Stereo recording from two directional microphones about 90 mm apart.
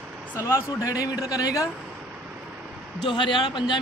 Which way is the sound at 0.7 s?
40° left (ahead or behind).